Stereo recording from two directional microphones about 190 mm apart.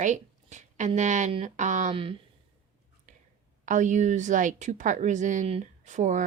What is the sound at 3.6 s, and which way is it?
Speech, 40° right (ahead or behind).